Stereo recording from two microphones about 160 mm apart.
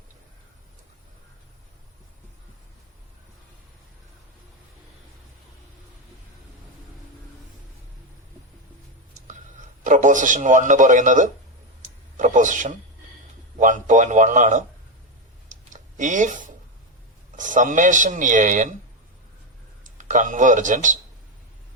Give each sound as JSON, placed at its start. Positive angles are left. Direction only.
{"t": 9.2, "sound": "speech", "side_deg": -55}
{"t": 15.4, "sound": "a sound", "side_deg": -50}
{"t": 17.3, "sound": "speech", "side_deg": -55}
{"t": 19.8, "sound": "speech", "side_deg": -50}